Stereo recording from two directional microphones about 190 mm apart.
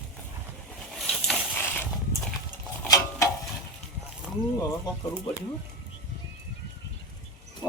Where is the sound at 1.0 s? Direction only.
Centre (ahead or behind).